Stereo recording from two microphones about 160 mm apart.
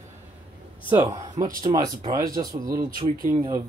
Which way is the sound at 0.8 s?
25° right (ahead or behind).